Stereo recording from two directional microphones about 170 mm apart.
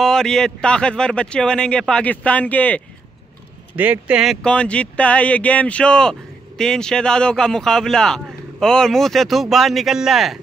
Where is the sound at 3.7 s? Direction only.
10° right (ahead or behind).